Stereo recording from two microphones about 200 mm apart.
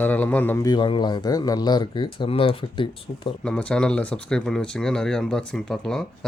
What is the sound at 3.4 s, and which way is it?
Speech, 5° left (ahead or behind).